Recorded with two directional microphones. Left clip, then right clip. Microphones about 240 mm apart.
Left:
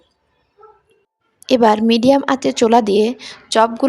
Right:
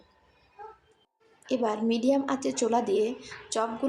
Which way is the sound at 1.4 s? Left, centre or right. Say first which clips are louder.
Left 15 dB; left.